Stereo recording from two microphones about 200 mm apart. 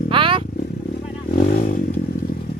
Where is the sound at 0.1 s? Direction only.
25° right (ahead or behind).